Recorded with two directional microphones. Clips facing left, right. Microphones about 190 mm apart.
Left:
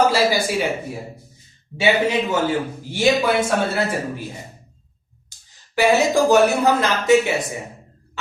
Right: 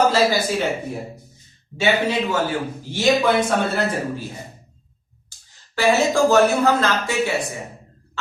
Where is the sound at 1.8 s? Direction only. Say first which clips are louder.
Left 1 dB; 20° left (ahead or behind).